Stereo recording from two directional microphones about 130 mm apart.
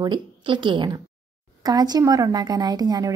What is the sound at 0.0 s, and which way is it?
A woman's voice, 35° right (ahead or behind).